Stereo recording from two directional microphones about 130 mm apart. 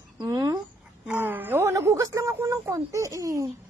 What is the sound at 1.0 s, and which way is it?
Speech, 15° right (ahead or behind).